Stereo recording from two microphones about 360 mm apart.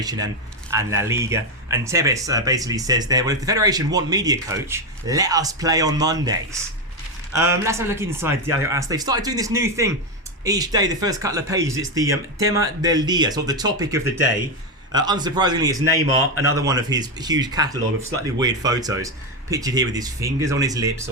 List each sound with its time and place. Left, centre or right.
0.0 s speech: centre